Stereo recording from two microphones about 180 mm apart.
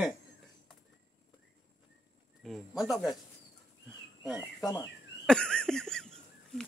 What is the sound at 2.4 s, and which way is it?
Speech, centre (ahead or behind).